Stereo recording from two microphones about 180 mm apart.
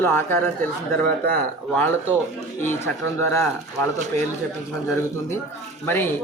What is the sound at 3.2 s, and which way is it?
Speech, 15° left (ahead or behind).